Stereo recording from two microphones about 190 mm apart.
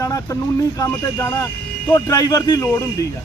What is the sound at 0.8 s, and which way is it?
Speech, 20° left (ahead or behind).